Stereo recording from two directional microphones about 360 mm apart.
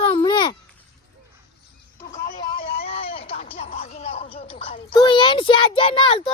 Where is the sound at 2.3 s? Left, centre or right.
Centre.